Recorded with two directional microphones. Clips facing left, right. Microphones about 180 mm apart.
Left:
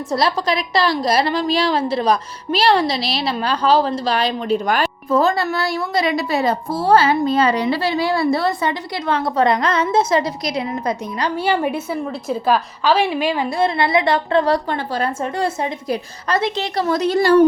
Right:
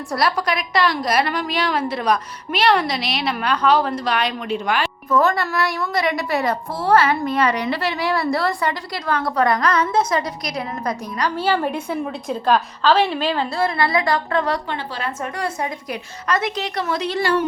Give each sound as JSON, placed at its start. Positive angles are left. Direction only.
{"t": 0.1, "sound": "a woman's voice", "side_deg": 25}
{"t": 11.3, "sound": "a woman's voice", "side_deg": 10}
{"t": 15.2, "sound": "a woman's voice", "side_deg": 25}